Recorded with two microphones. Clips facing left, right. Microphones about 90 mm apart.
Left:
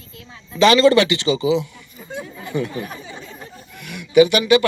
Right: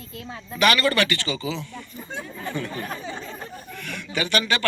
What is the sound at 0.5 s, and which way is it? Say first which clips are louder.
A man's voice: left 8 dB; 25° left (ahead or behind).